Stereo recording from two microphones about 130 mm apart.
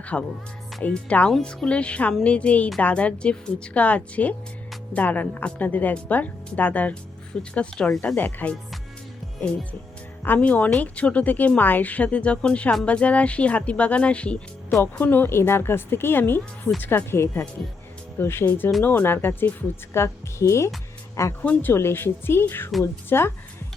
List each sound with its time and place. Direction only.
0.0 s speech: 10° left (ahead or behind)
10.2 s speech: 10° left (ahead or behind)